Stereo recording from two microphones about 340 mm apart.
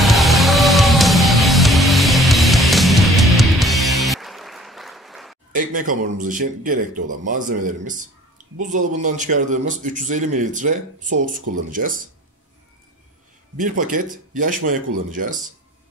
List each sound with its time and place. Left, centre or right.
0.0 s music: centre
5.5 s a man's voice: right
13.6 s a man's voice: right